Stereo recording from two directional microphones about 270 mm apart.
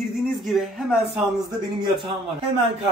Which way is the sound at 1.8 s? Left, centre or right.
Centre.